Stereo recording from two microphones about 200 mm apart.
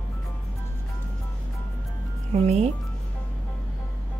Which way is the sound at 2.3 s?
30° right (ahead or behind).